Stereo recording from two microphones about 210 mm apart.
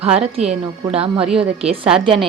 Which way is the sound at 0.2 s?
30° right (ahead or behind).